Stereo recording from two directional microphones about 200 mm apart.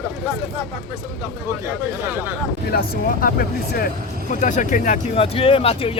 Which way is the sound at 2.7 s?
50° left (ahead or behind).